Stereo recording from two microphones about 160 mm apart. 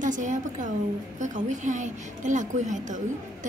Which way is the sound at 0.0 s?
50° right (ahead or behind).